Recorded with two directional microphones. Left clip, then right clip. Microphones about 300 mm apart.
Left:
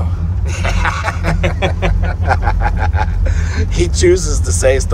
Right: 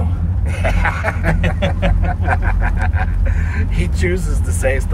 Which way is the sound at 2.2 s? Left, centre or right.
Centre.